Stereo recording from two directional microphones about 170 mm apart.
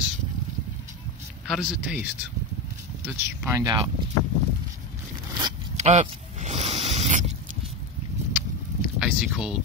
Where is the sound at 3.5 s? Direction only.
20° right (ahead or behind).